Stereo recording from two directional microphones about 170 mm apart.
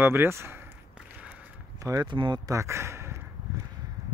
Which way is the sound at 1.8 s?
20° right (ahead or behind).